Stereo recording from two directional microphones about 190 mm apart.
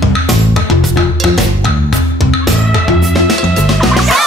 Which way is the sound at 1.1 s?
Centre (ahead or behind).